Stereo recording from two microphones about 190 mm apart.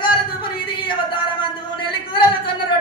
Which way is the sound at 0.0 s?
25° left (ahead or behind).